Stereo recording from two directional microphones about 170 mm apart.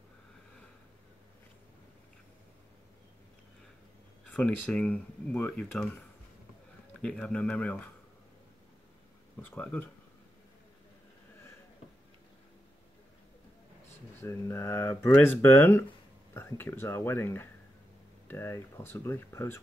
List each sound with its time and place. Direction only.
4.3 s speech: 10° left (ahead or behind)
7.0 s speech: 5° left (ahead or behind)
9.4 s speech: 10° left (ahead or behind)
14.2 s speech: 15° left (ahead or behind)